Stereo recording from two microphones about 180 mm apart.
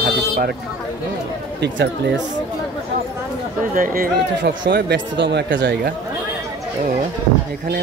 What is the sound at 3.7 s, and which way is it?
Speech, 50° right (ahead or behind).